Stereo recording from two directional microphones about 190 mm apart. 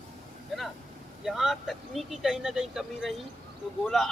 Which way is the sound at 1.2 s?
Centre (ahead or behind).